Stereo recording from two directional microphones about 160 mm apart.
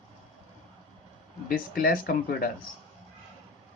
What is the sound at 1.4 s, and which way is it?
Speech, 60° left (ahead or behind).